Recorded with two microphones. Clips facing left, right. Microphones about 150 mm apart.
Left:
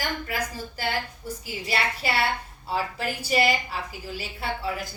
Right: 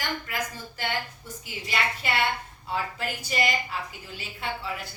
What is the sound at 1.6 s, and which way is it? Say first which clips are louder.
Speech: left 2 dB; 35° left (ahead or behind).